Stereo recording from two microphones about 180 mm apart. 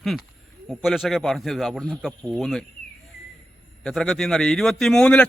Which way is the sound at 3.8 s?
Centre (ahead or behind).